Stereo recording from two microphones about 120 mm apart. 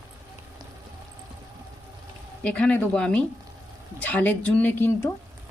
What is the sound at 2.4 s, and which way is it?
A woman's voice, 10° left (ahead or behind).